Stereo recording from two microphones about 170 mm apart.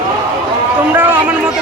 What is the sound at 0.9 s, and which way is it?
Speech, 10° right (ahead or behind).